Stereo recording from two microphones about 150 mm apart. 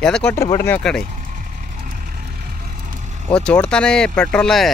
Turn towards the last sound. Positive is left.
turn(degrees=5)  # may be behind; listen again after turning